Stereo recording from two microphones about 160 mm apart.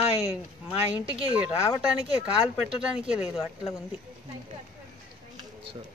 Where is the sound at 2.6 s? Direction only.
5° right (ahead or behind).